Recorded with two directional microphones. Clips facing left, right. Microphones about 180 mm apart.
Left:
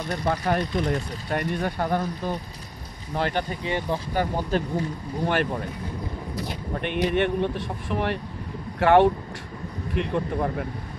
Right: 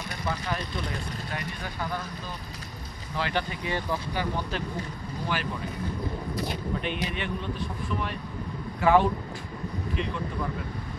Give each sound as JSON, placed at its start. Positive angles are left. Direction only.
{"t": 0.1, "sound": "speech", "side_deg": 55}
{"t": 3.2, "sound": "speech", "side_deg": 45}
{"t": 3.6, "sound": "speech", "side_deg": 25}
{"t": 4.1, "sound": "speech", "side_deg": 45}
{"t": 5.3, "sound": "speech", "side_deg": 55}
{"t": 6.7, "sound": "speech", "side_deg": 55}
{"t": 9.9, "sound": "speech", "side_deg": 55}